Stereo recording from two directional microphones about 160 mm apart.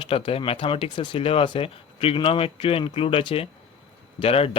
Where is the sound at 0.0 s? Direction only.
35° left (ahead or behind).